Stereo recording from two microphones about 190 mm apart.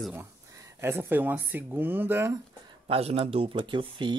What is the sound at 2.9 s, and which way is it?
Speech, 30° right (ahead or behind).